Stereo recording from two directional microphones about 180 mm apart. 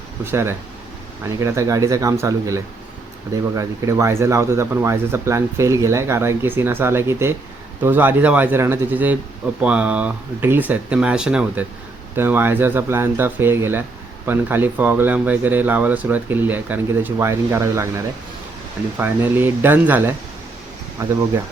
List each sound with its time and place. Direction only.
0.3 s speech: 15° right (ahead or behind)